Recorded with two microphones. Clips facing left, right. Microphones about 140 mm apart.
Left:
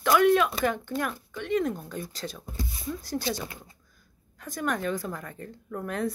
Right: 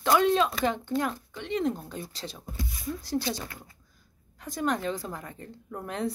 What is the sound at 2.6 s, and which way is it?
Speech, 30° left (ahead or behind).